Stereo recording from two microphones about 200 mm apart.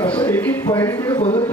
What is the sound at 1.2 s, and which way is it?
Speech, 30° left (ahead or behind).